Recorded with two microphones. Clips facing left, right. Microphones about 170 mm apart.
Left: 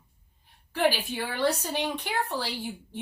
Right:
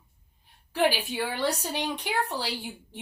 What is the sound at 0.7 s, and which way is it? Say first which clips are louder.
A woman's voice: even; 15° right (ahead or behind).